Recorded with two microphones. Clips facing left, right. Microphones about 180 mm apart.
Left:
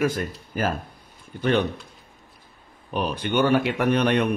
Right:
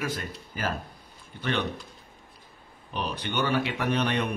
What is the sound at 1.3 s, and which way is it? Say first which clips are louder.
Speech: left 9 dB; 45° left (ahead or behind).